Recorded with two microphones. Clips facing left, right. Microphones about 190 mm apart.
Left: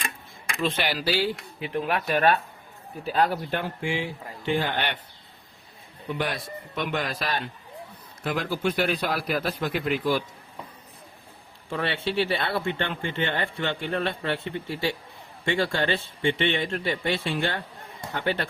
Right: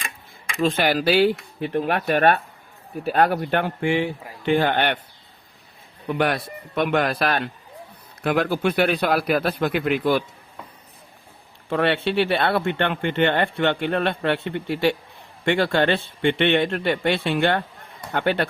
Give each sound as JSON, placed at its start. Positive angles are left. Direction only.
{"t": 0.6, "sound": "speech", "side_deg": -50}
{"t": 1.5, "sound": "speech", "side_deg": -45}
{"t": 6.1, "sound": "speech", "side_deg": -60}
{"t": 11.7, "sound": "speech", "side_deg": -65}